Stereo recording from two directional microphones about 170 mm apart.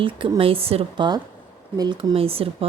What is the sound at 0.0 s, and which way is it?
Speech, 30° right (ahead or behind).